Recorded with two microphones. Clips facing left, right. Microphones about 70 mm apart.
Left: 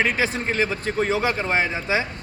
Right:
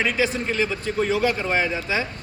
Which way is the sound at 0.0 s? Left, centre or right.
Left.